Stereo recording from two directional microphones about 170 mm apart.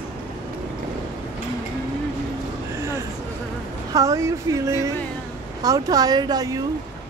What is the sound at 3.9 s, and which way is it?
Speech, 20° right (ahead or behind).